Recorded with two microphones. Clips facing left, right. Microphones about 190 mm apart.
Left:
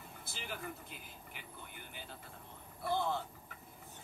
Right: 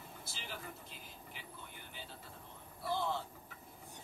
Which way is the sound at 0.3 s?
55° left (ahead or behind).